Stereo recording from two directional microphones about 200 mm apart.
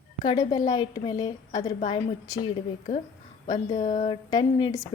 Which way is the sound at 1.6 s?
35° left (ahead or behind).